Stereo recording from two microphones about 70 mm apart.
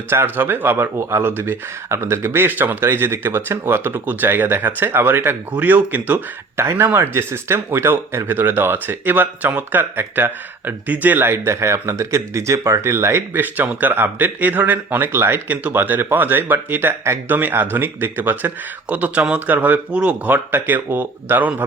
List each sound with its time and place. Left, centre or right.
0.1 s speech: right
13.7 s speech: right